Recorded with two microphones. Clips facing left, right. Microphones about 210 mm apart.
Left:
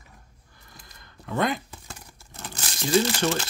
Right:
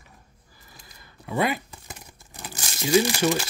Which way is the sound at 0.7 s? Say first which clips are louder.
Even; 5° right (ahead or behind).